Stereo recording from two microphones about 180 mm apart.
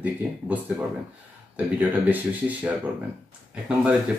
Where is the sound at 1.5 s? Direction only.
10° right (ahead or behind).